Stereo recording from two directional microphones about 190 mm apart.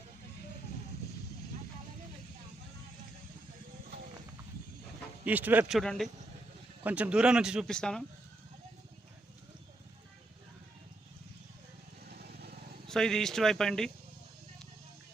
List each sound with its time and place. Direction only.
5.2 s speech: 10° right (ahead or behind)
12.0 s vehicle: 55° right (ahead or behind)
12.9 s speech: 5° left (ahead or behind)